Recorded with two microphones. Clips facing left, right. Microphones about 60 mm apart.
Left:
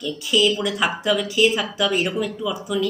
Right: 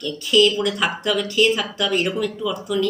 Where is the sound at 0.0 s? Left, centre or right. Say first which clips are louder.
Right 3 dB; centre.